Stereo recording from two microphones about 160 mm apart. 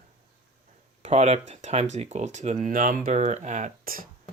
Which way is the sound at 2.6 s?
55° right (ahead or behind).